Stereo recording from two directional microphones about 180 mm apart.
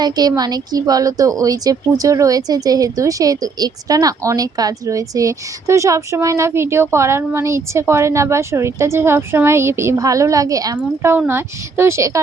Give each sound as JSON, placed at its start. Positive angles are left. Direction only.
{"t": 0.0, "sound": "speech", "side_deg": -20}